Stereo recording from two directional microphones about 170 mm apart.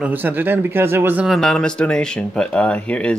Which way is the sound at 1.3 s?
Centre (ahead or behind).